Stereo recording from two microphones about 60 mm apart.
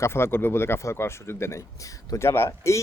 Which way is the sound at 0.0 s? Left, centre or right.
Left.